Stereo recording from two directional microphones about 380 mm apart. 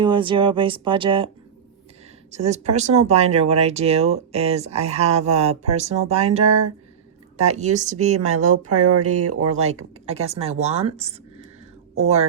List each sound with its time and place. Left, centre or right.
0.0 s speech: centre
2.3 s speech: centre
8.4 s speech: right
10.1 s speech: centre